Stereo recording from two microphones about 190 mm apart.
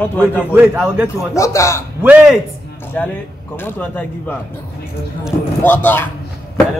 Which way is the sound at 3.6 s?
10° left (ahead or behind).